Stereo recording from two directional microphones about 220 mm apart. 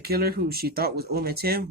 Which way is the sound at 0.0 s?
45° right (ahead or behind).